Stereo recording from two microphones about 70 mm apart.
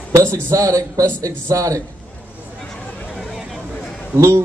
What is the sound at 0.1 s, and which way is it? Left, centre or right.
Speech, right.